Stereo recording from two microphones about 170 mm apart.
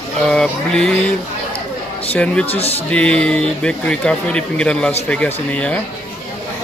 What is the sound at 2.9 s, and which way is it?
Speech, 5° left (ahead or behind).